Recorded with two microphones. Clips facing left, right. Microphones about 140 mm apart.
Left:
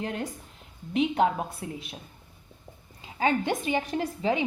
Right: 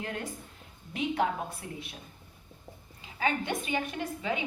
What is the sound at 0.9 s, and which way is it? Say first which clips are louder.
Speech: left 6 dB; 25° left (ahead or behind).